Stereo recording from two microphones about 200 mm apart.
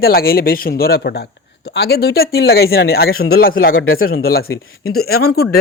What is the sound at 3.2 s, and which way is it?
Speech, 90° left.